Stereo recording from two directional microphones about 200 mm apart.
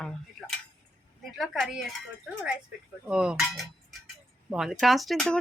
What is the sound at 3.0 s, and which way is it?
Speech, 5° right (ahead or behind).